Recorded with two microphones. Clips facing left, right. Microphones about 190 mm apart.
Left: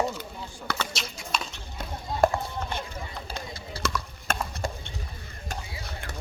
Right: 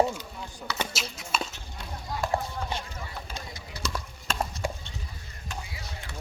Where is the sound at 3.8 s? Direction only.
60° left (ahead or behind).